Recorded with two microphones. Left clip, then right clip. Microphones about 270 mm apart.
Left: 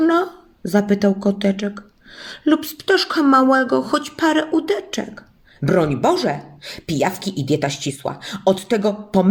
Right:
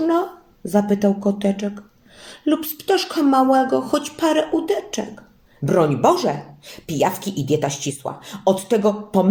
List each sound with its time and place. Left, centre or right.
0.0 s a woman's voice: left